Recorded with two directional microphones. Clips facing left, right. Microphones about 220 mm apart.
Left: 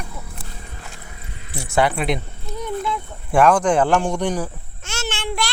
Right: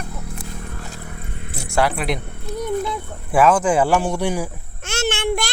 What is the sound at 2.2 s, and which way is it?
Music, 60° right (ahead or behind).